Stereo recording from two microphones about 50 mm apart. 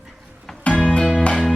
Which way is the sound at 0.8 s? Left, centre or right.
Centre.